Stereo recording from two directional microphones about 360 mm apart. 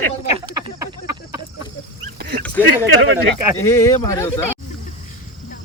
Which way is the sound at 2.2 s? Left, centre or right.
Right.